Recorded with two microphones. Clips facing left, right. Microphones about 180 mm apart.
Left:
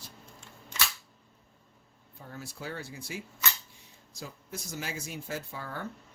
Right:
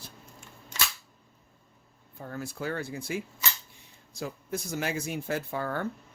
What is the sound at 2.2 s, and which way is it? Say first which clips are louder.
Speech: right 7 dB; 55° right (ahead or behind).